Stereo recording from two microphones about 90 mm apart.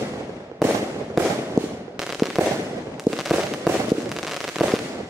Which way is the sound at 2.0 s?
5° right (ahead or behind).